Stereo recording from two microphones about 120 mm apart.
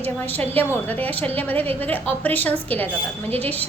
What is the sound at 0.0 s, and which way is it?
A woman's voice, 15° left (ahead or behind).